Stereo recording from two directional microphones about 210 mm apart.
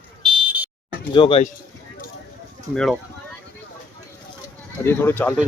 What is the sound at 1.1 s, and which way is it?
Speech, 25° left (ahead or behind).